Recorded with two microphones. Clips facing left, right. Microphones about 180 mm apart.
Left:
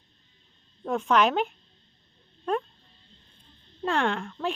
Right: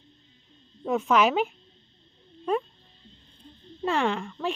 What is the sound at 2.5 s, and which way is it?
Dog, centre (ahead or behind).